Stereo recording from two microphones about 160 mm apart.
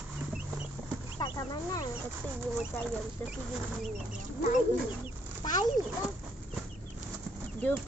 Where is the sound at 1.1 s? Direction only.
25° left (ahead or behind).